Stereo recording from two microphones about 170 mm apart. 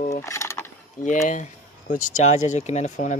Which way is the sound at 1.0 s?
45° left (ahead or behind).